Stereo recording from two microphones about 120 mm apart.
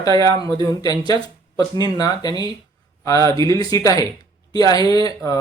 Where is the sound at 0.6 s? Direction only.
30° left (ahead or behind).